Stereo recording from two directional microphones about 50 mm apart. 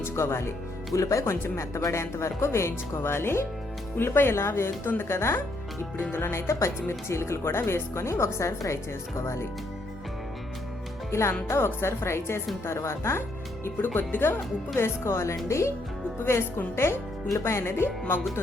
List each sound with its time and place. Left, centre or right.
0.0 s speech: left
0.9 s speech: left
1.2 s speech: left
6.1 s speech: left
6.3 s speech: left
11.1 s speech: left
13.7 s speech: left
14.8 s speech: left
15.4 s speech: left
16.2 s speech: left